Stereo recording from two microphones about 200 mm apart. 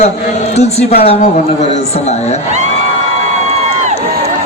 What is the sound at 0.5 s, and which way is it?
Music, 30° left (ahead or behind).